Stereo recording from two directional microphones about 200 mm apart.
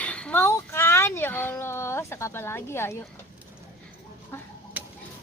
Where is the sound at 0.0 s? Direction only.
5° left (ahead or behind).